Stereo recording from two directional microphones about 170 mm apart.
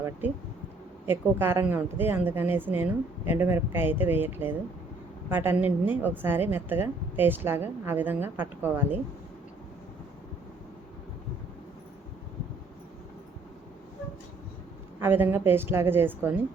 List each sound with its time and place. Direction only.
0.2 s speech: 10° right (ahead or behind)
15.0 s speech: 10° right (ahead or behind)